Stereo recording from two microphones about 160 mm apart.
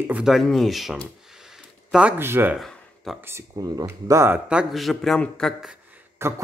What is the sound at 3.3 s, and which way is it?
Speech, 20° right (ahead or behind).